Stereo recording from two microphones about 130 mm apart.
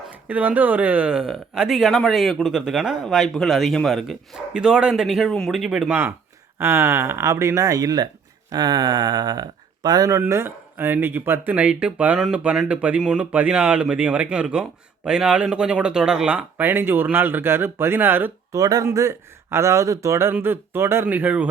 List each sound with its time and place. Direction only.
0.3 s speech: 10° right (ahead or behind)
6.6 s speech: 20° right (ahead or behind)